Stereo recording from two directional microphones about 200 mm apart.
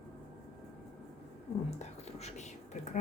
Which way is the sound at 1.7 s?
35° left (ahead or behind).